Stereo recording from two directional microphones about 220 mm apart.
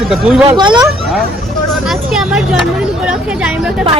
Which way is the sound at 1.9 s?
Centre (ahead or behind).